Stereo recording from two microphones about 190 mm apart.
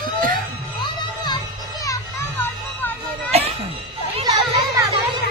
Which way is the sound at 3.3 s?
35° right (ahead or behind).